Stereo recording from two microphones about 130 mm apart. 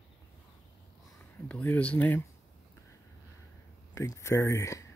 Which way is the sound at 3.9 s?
25° left (ahead or behind).